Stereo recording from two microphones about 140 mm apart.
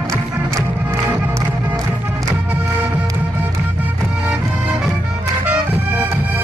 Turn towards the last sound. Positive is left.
turn(degrees=-15)  # may be behind; listen again after turning